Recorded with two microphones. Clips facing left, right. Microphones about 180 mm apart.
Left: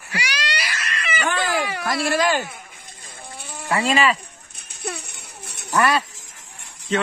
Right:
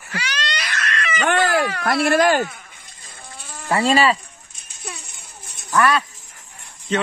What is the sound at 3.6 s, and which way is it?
Speech, 35° right (ahead or behind).